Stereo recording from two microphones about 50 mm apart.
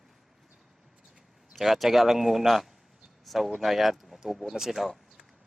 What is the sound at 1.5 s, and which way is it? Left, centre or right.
Speech, centre.